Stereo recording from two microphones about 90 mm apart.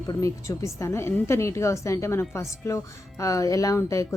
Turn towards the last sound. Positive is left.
turn(degrees=35)  # may be behind; listen again after turning